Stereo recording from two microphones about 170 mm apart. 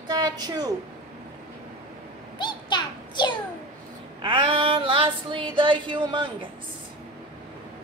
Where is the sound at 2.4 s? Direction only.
25° left (ahead or behind).